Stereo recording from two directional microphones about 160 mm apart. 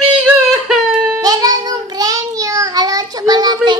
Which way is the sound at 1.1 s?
25° right (ahead or behind).